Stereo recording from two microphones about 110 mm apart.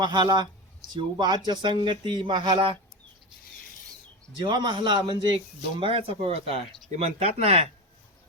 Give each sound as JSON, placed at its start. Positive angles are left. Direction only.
{"t": 0.0, "sound": "speech", "side_deg": -40}
{"t": 4.4, "sound": "speech", "side_deg": -45}
{"t": 5.8, "sound": "speech", "side_deg": -55}
{"t": 6.9, "sound": "speech", "side_deg": -75}